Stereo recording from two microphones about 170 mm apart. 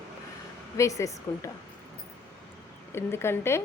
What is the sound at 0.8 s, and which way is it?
Speech, 20° left (ahead or behind).